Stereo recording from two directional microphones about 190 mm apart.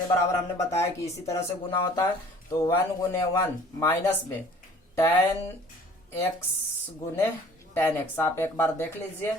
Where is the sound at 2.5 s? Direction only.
15° left (ahead or behind).